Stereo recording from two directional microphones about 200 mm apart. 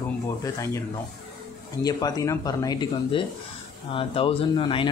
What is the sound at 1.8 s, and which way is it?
Speech, 20° left (ahead or behind).